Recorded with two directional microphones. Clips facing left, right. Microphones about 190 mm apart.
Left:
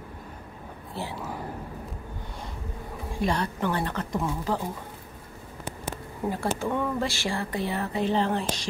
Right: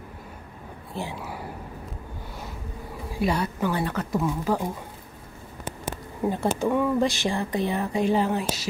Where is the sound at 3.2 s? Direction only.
10° right (ahead or behind).